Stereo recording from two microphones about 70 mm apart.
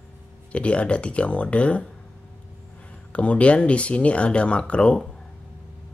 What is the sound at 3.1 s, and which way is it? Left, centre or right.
Speech, centre.